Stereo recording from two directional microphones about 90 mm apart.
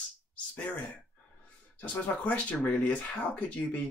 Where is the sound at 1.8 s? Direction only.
15° left (ahead or behind).